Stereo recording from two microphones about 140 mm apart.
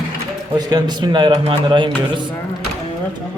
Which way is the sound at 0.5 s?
30° right (ahead or behind).